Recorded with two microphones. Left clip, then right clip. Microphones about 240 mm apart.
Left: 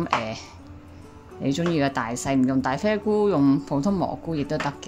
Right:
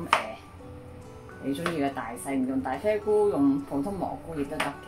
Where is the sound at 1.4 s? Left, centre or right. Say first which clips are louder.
Left 5 dB; left.